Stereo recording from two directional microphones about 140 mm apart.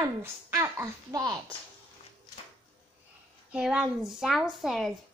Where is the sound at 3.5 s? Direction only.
5° right (ahead or behind).